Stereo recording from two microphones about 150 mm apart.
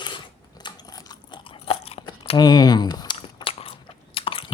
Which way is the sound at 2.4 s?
25° left (ahead or behind).